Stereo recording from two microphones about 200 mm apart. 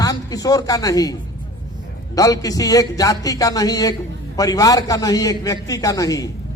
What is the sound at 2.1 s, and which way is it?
A man's voice, 15° left (ahead or behind).